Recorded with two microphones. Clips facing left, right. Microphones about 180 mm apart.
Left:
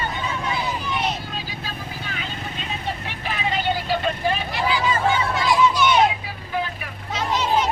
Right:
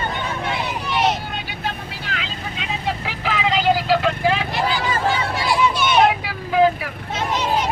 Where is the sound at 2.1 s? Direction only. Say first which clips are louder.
Right 2 dB; 90° right.